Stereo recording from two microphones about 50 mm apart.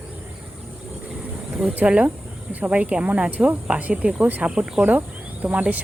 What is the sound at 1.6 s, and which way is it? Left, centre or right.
Speech, right.